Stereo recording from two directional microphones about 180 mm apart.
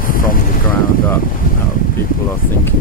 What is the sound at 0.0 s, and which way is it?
Vehicle, 50° left (ahead or behind).